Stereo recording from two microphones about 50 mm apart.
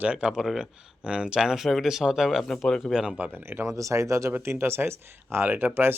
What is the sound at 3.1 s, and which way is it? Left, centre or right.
Speech, right.